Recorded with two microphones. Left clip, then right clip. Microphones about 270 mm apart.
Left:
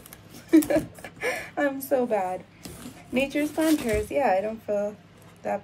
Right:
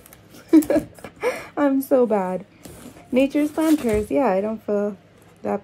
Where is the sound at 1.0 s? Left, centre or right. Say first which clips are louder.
Right 4 dB; right.